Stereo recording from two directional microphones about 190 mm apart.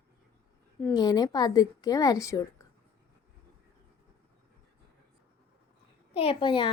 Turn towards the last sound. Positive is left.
turn(degrees=25)  # may be behind; listen again after turning